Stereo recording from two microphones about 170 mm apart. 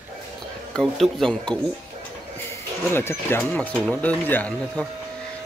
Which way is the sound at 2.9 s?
15° left (ahead or behind).